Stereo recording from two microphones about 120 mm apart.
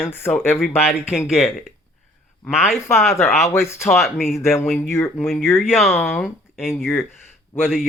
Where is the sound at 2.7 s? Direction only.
20° left (ahead or behind).